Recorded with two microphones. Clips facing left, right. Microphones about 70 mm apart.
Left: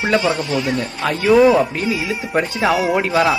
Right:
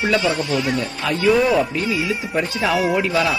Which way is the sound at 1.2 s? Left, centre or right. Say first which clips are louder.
Left 5 dB; centre.